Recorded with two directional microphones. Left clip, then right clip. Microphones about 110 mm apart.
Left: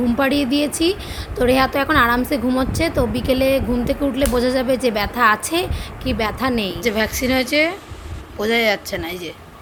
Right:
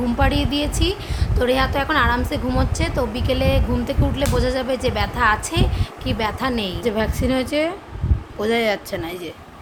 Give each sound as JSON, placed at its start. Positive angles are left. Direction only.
{"t": 0.2, "sound": "a woman's voice", "side_deg": 40}
{"t": 6.8, "sound": "speech", "side_deg": 0}